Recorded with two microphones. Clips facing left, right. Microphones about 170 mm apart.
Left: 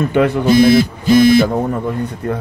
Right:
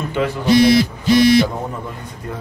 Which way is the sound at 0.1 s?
55° left (ahead or behind).